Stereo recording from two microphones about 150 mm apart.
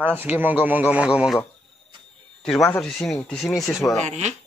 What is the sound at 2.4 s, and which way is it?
Speech, 5° left (ahead or behind).